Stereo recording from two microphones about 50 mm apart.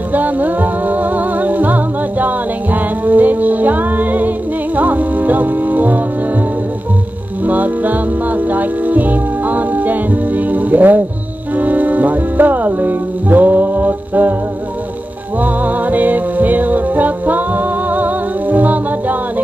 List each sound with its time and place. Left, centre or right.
0.1 s music: right
7.4 s music: right
15.3 s music: right